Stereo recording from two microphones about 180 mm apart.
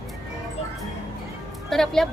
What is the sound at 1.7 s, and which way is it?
Speech, centre (ahead or behind).